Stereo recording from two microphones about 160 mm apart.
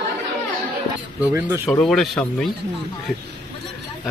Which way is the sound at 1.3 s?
10° right (ahead or behind).